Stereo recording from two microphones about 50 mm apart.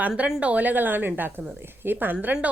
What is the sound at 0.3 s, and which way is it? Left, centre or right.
Speech, right.